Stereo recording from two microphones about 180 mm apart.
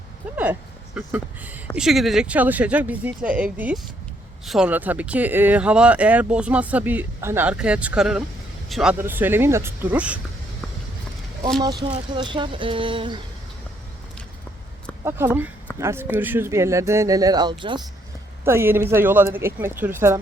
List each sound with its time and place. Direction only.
0.9 s speech: 10° right (ahead or behind)
11.6 s speech: 20° right (ahead or behind)
15.8 s speech: 15° right (ahead or behind)
18.4 s speech: 15° right (ahead or behind)